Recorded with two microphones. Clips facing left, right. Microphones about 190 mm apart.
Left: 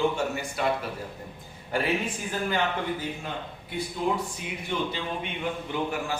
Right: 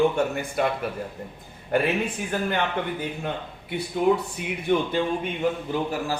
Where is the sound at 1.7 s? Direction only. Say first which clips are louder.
Right 4 dB; 60° right (ahead or behind).